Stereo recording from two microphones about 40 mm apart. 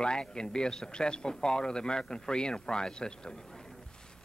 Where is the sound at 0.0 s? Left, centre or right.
Left.